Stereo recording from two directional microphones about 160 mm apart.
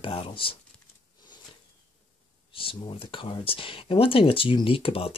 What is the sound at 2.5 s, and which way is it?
Speech, 35° left (ahead or behind).